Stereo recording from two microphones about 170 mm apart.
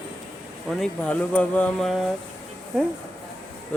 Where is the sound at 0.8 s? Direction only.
5° left (ahead or behind).